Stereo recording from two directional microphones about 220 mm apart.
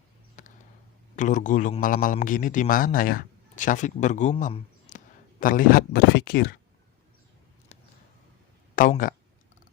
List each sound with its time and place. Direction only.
0.4 s a sound: 35° left (ahead or behind)
1.1 s a man's voice: 35° left (ahead or behind)
8.7 s speech: 40° left (ahead or behind)